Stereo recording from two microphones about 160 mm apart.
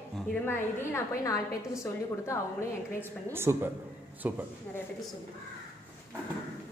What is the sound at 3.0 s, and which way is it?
Speech, 15° right (ahead or behind).